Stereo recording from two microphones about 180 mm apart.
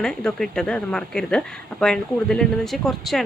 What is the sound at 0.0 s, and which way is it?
A woman's voice, 5° left (ahead or behind).